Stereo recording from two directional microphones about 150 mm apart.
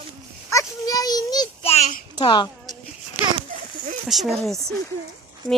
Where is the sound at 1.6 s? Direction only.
50° left (ahead or behind).